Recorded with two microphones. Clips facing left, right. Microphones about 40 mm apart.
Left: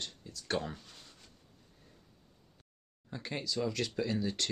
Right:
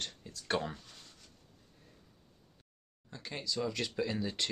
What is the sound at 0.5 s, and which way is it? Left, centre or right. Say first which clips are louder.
Speech: right 1 dB; centre.